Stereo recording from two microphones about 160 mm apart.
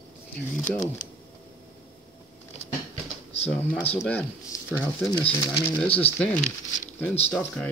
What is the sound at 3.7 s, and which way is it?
Speech, 10° left (ahead or behind).